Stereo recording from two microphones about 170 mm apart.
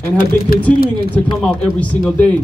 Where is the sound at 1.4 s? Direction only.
5° left (ahead or behind).